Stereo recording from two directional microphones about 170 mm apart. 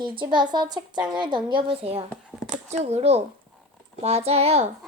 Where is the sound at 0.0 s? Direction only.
30° right (ahead or behind).